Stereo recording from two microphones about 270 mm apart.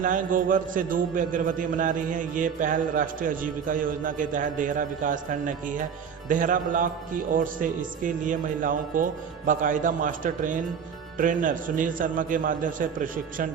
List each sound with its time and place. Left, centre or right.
0.0 s a man's voice: right